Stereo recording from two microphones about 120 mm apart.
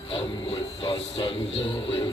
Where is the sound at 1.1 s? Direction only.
50° left (ahead or behind).